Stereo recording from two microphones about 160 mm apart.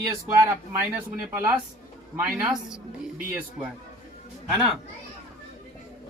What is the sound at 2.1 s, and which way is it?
Speech, 10° right (ahead or behind).